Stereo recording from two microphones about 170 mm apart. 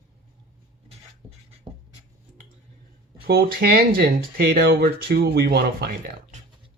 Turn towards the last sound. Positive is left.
turn(degrees=-70)  # may be behind; listen again after turning